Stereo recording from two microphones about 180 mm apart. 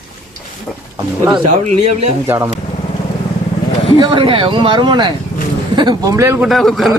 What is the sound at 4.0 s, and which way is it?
A man's voice, 25° right (ahead or behind).